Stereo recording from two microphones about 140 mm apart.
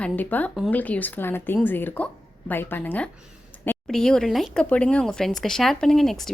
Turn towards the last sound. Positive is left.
turn(degrees=0)  # may be behind; listen again after turning